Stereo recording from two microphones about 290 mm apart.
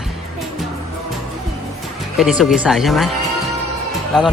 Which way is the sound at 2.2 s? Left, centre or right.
Centre.